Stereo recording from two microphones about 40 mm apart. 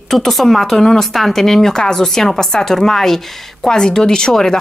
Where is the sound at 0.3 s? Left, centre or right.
Centre.